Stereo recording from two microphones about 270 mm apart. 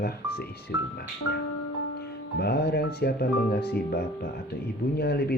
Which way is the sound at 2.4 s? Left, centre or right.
Left.